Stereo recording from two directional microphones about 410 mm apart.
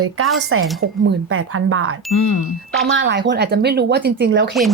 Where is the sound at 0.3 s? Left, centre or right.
Right.